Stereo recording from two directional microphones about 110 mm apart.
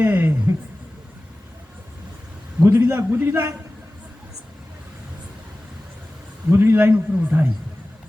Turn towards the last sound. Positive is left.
turn(degrees=-20)  # may be behind; listen again after turning